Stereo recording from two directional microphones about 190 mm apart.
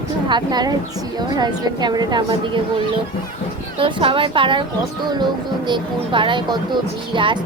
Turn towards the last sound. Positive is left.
turn(degrees=-25)  # may be behind; listen again after turning